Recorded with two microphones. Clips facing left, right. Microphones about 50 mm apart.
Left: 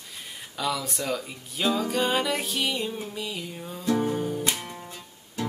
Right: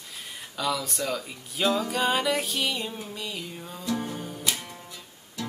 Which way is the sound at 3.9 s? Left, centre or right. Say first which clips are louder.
Left 7 dB; centre.